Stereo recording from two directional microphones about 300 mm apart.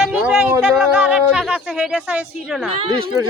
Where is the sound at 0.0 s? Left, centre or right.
Centre.